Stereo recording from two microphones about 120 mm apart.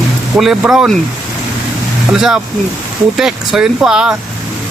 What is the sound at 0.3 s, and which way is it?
Speech, 5° right (ahead or behind).